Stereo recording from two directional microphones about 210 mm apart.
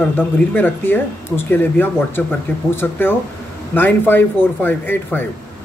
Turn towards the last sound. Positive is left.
turn(degrees=10)  # may be behind; listen again after turning